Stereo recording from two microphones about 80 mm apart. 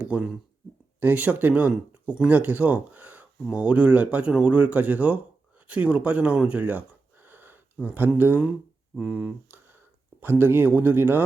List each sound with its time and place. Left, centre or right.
0.0 s speech: centre
10.2 s speech: right